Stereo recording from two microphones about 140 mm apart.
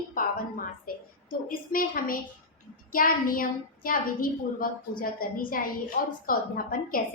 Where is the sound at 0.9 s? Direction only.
90° left.